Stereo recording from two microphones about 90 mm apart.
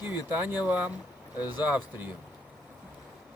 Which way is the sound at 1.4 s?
55° left (ahead or behind).